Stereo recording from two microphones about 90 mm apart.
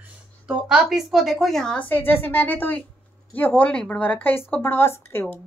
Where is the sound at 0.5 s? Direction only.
10° right (ahead or behind); by 1.9 s 5° left (ahead or behind).